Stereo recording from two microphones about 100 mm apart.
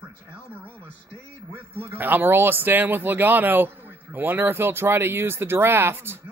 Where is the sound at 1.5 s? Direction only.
20° right (ahead or behind).